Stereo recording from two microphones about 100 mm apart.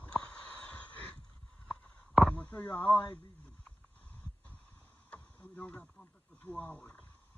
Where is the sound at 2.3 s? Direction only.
15° left (ahead or behind).